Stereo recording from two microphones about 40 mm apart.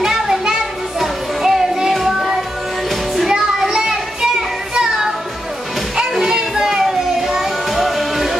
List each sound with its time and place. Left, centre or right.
0.0 s music: centre
3.2 s music: centre
6.1 s music: centre
6.8 s music: centre